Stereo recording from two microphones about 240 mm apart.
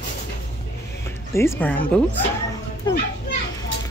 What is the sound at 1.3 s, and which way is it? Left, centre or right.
Speech, centre.